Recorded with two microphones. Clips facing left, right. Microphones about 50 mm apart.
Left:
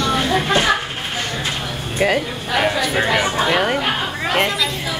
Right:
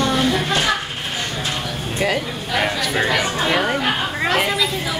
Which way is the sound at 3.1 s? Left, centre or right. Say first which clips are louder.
Left 2 dB; centre.